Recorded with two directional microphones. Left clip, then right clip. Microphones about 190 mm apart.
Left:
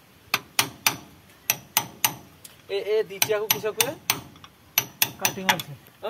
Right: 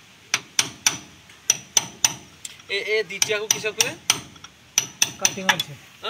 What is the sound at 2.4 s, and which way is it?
Speech, 45° left (ahead or behind).